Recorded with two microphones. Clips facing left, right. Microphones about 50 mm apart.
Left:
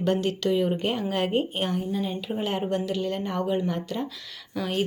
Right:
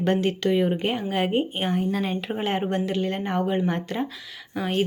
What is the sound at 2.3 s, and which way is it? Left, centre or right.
Speech, right.